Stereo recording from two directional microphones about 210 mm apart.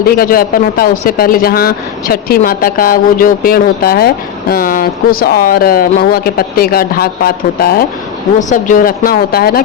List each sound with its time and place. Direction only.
0.0 s speech: 45° left (ahead or behind)